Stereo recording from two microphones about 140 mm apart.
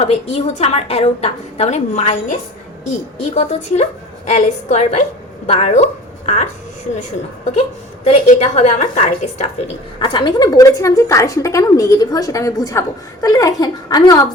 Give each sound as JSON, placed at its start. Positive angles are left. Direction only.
{"t": 0.0, "sound": "a woman's voice", "side_deg": 50}
{"t": 8.3, "sound": "a woman's voice", "side_deg": 55}
{"t": 10.0, "sound": "speech", "side_deg": 35}